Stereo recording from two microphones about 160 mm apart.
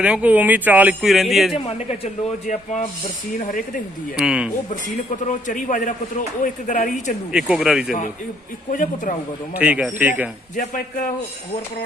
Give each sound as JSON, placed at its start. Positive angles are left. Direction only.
{"t": 0.0, "sound": "speech", "side_deg": -10}
{"t": 1.5, "sound": "a man's voice", "side_deg": 40}
{"t": 4.2, "sound": "speech", "side_deg": -5}
{"t": 5.2, "sound": "a man's voice", "side_deg": 50}
{"t": 7.3, "sound": "speech", "side_deg": -5}
{"t": 8.7, "sound": "a man's voice", "side_deg": 55}
{"t": 9.6, "sound": "speech", "side_deg": -10}
{"t": 10.6, "sound": "a man's voice", "side_deg": 55}